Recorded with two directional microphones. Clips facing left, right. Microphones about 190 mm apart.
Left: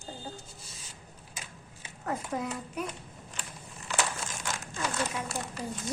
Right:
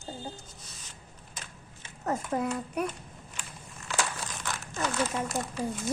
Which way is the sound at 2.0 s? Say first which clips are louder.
Right 4 dB; 50° right (ahead or behind).